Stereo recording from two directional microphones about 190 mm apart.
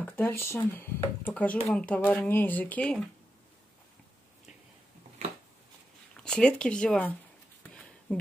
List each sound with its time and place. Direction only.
0.0 s speech: 10° left (ahead or behind)
6.2 s speech: 5° left (ahead or behind)
7.7 s a sound: 5° left (ahead or behind)